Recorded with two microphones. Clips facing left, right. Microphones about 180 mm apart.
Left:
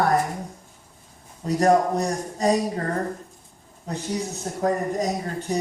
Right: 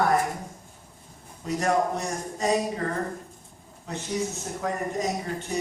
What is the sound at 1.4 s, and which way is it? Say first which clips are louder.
A woman's voice: left 5 dB; 35° left (ahead or behind).